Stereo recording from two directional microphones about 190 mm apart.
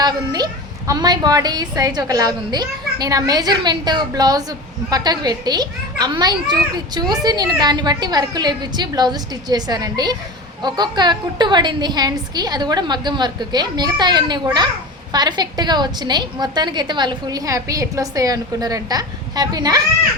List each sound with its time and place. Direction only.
0.0 s a child's voice: 20° right (ahead or behind)